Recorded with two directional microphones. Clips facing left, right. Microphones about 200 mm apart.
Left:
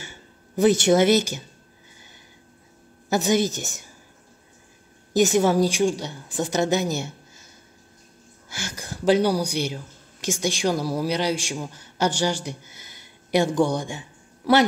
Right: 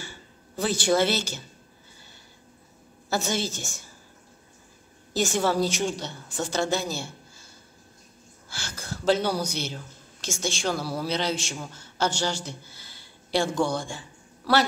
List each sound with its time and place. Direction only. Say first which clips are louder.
0.0 s a sound: even; 20° left (ahead or behind)
3.1 s a woman's voice: left 7 dB; 15° left (ahead or behind)
5.1 s a woman's voice: left 6 dB; 20° left (ahead or behind)
8.5 s a man's voice: left 3 dB; 15° left (ahead or behind)